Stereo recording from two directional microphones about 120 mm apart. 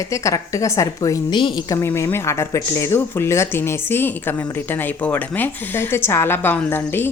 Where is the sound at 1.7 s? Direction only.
25° left (ahead or behind).